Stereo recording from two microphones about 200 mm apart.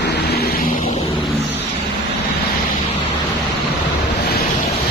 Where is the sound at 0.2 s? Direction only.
55° left (ahead or behind).